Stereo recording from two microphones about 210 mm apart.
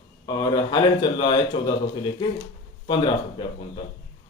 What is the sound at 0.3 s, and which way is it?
A man's voice, 20° left (ahead or behind).